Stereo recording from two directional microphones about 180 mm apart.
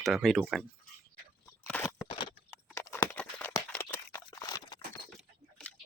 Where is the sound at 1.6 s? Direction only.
10° left (ahead or behind).